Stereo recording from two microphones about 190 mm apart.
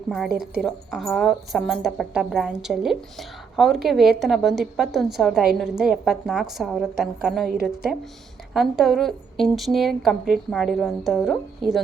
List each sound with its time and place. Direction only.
0.3 s a woman's voice: 55° right (ahead or behind)
0.6 s speech: centre (ahead or behind)
8.5 s speech: centre (ahead or behind)